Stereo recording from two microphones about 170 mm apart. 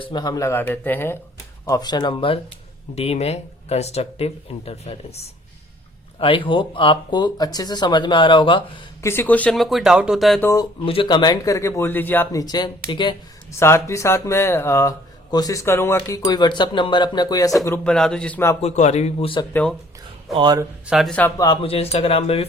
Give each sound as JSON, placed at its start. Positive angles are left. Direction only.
{"t": 0.0, "sound": "speech", "side_deg": 25}
{"t": 9.0, "sound": "speech", "side_deg": 15}
{"t": 10.4, "sound": "speech", "side_deg": 20}
{"t": 10.8, "sound": "speech", "side_deg": 30}
{"t": 13.6, "sound": "speech", "side_deg": 15}
{"t": 17.8, "sound": "speech", "side_deg": 5}
{"t": 18.6, "sound": "speech", "side_deg": 40}
{"t": 20.3, "sound": "speech", "side_deg": -25}
{"t": 20.8, "sound": "speech", "side_deg": 0}
{"t": 21.3, "sound": "speech", "side_deg": 25}